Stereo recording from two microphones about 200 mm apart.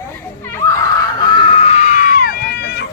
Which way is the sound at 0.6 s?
15° left (ahead or behind).